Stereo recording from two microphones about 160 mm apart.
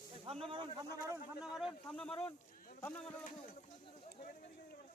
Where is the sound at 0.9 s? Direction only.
20° right (ahead or behind).